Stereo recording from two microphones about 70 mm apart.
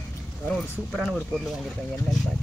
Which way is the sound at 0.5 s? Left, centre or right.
Centre.